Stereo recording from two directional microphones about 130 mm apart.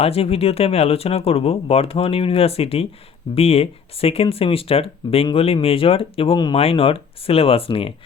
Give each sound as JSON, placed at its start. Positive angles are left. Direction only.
{"t": 0.0, "sound": "speech", "side_deg": 50}